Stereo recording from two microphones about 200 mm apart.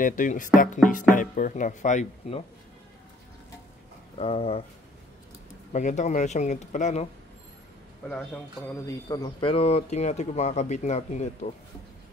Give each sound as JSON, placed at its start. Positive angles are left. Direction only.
{"t": 0.0, "sound": "speech", "side_deg": 40}
{"t": 4.2, "sound": "speech", "side_deg": 30}
{"t": 5.7, "sound": "speech", "side_deg": 35}
{"t": 8.8, "sound": "speech", "side_deg": 20}